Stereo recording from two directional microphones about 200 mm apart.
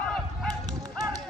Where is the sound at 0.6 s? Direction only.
20° right (ahead or behind).